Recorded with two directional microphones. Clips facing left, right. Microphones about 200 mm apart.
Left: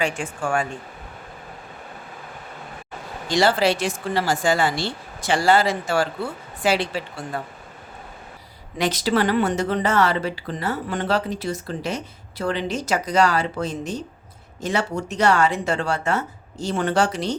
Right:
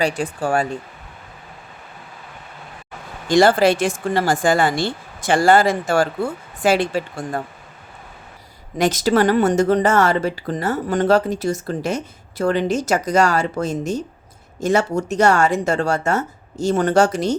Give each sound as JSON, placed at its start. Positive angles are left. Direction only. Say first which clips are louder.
{"t": 0.0, "sound": "speech", "louder": "right 4 dB", "side_deg": -40}
{"t": 3.2, "sound": "speech", "louder": "right 5 dB", "side_deg": -50}
{"t": 8.8, "sound": "speech", "louder": "right 5 dB", "side_deg": -45}